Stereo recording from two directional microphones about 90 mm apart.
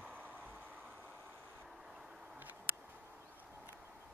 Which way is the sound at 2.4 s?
20° right (ahead or behind).